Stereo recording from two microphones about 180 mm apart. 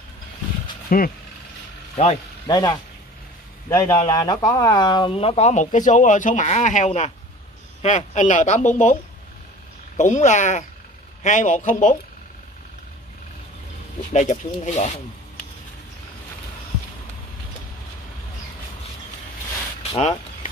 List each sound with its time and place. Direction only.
0.8 s speech: 50° left (ahead or behind)
2.0 s speech: 35° left (ahead or behind)
3.6 s a man's voice: 15° left (ahead or behind); by 8.9 s 45° left (ahead or behind)
9.9 s a man's voice: 45° left (ahead or behind)
14.1 s speech: 40° left (ahead or behind)
19.8 s speech: 35° left (ahead or behind)